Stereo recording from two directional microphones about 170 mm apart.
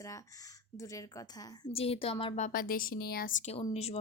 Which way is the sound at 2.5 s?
55° left (ahead or behind).